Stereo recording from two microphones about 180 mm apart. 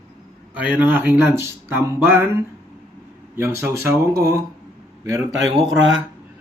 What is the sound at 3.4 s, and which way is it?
Speech, 15° right (ahead or behind).